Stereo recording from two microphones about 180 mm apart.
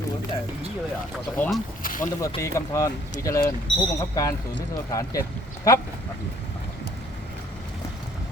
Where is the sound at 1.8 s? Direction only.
50° left (ahead or behind).